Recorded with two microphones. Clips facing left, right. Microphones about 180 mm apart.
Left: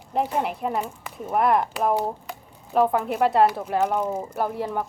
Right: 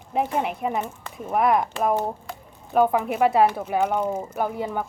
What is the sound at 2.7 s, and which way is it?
Speech, 5° right (ahead or behind).